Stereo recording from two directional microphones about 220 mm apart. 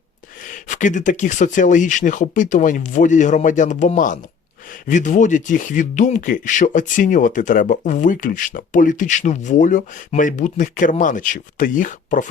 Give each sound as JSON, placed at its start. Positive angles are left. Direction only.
{"t": 0.4, "sound": "speech", "side_deg": 35}